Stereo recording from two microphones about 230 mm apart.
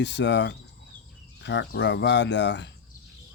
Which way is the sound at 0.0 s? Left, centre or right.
Left.